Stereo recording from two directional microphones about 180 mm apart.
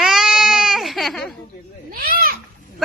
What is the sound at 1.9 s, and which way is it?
Speech, 55° right (ahead or behind).